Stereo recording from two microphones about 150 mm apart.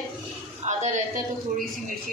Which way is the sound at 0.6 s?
50° right (ahead or behind).